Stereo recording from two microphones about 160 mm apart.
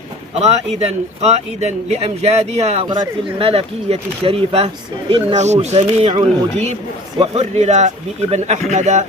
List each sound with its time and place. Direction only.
0.3 s speech: 40° right (ahead or behind)
2.9 s speech: 30° right (ahead or behind); by 9.0 s 45° right (ahead or behind)